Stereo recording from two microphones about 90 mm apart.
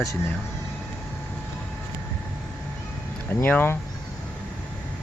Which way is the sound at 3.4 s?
20° left (ahead or behind).